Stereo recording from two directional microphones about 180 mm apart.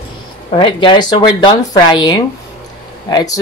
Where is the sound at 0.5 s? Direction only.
25° left (ahead or behind).